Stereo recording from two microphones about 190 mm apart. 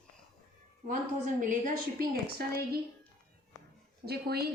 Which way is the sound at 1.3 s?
45° right (ahead or behind).